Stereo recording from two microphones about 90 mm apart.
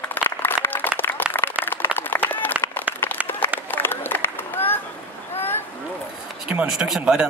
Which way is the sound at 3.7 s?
25° left (ahead or behind).